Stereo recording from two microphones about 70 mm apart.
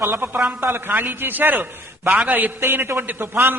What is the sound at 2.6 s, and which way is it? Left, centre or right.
Speech, right.